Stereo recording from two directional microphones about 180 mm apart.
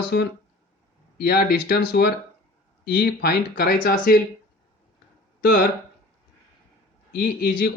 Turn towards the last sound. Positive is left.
turn(degrees=55)  # may be behind; listen again after turning